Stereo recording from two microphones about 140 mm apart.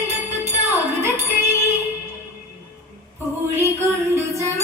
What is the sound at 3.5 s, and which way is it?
Music, 15° right (ahead or behind).